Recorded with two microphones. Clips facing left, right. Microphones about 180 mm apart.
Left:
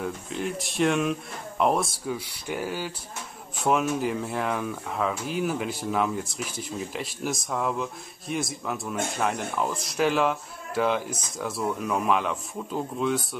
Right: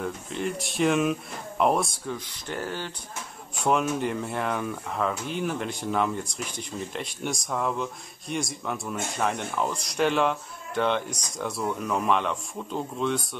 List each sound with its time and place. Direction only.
0.0 s speech: centre (ahead or behind)